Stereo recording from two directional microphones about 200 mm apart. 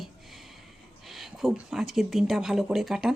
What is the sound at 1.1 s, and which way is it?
Speech, centre (ahead or behind).